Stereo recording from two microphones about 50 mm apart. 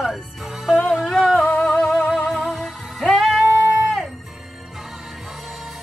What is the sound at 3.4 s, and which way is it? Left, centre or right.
Music, right.